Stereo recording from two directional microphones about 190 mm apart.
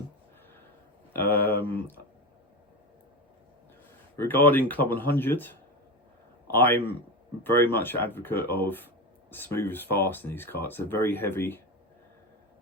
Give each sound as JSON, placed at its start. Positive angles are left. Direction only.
{"t": 1.2, "sound": "speech", "side_deg": 10}
{"t": 4.2, "sound": "speech", "side_deg": 10}